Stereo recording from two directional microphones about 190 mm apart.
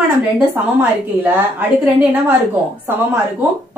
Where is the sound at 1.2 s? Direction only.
10° right (ahead or behind).